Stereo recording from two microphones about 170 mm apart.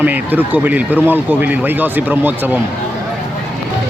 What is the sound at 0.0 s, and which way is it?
Speech, 10° right (ahead or behind).